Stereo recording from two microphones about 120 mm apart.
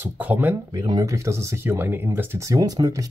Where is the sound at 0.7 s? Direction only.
35° right (ahead or behind); by 2.5 s 20° right (ahead or behind).